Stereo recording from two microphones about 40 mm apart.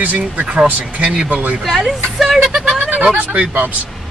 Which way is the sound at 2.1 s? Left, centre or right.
Centre.